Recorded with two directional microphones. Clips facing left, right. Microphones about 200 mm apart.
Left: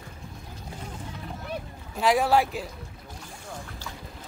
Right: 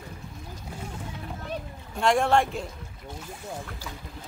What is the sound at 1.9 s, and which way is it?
Speech, 5° left (ahead or behind).